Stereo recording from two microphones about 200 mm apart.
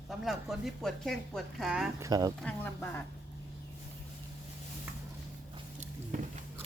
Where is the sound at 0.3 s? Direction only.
Centre (ahead or behind).